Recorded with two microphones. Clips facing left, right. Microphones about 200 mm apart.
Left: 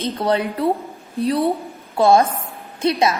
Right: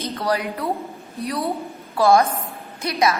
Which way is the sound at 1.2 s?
30° left (ahead or behind).